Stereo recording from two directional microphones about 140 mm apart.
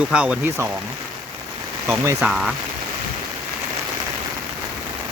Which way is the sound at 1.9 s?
20° right (ahead or behind).